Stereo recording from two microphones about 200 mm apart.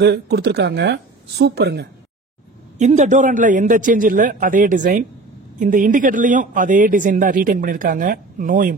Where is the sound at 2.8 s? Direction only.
35° right (ahead or behind).